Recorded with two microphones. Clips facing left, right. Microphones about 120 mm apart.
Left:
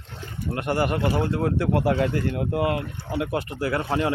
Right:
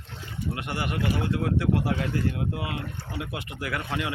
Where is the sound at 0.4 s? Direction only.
45° left (ahead or behind).